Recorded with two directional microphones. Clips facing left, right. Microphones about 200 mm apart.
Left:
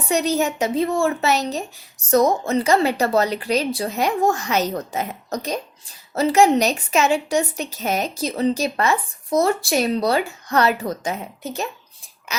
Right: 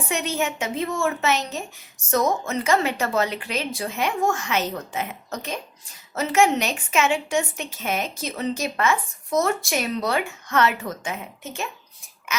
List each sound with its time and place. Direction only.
0.1 s a woman's voice: 35° left (ahead or behind)